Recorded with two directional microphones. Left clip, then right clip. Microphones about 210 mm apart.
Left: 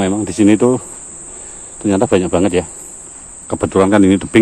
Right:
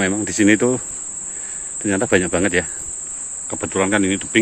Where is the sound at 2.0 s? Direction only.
10° left (ahead or behind).